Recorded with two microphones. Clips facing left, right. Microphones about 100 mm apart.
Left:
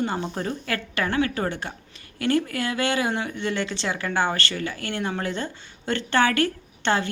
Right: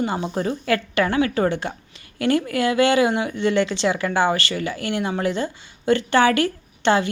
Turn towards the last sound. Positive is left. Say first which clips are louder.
# right 5 dB
turn(degrees=-15)  # may be behind; listen again after turning